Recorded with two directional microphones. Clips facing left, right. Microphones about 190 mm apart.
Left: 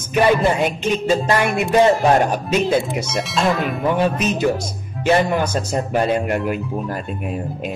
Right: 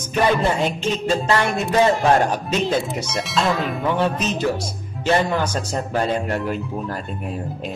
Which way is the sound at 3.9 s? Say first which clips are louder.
Left 3 dB; 15° left (ahead or behind).